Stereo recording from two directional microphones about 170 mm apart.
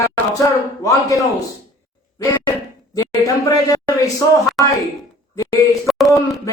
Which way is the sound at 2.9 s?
20° left (ahead or behind).